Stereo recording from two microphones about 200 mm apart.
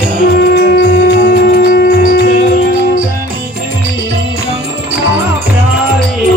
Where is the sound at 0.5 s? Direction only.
55° left (ahead or behind).